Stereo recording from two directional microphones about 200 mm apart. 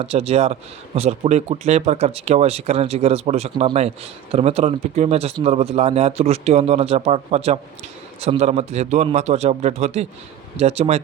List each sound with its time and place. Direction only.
0.0 s a man's voice: 30° right (ahead or behind)